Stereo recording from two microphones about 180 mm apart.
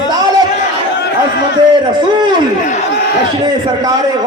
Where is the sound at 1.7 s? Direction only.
25° right (ahead or behind).